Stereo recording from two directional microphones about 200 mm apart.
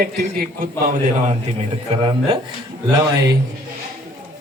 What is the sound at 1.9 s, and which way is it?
Speech, 25° right (ahead or behind).